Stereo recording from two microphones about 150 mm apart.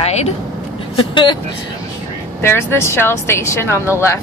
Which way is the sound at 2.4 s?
15° left (ahead or behind).